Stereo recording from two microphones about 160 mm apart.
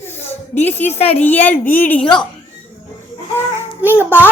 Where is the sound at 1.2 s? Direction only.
10° left (ahead or behind).